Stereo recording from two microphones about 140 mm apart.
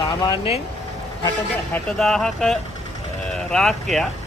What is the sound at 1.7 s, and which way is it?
Speech, 5° left (ahead or behind).